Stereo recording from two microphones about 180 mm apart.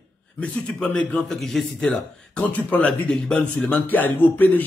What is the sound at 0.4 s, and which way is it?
Speech, 5° left (ahead or behind).